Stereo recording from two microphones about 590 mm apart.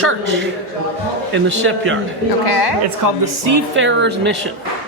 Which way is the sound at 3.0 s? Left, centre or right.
Right.